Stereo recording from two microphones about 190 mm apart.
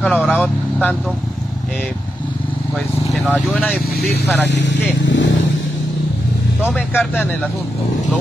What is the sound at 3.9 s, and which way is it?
Speech, 60° left (ahead or behind).